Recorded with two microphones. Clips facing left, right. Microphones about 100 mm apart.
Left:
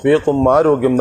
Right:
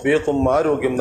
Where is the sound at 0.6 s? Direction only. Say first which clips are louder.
Left 5 dB; 35° left (ahead or behind).